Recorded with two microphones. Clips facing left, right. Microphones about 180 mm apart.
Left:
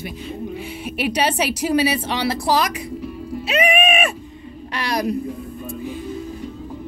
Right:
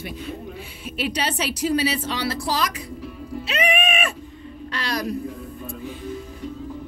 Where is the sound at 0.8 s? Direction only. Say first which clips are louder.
Left 2 dB; 65° left (ahead or behind).